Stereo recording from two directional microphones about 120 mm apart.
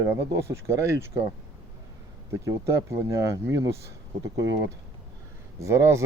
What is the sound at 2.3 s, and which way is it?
Speech, 25° right (ahead or behind).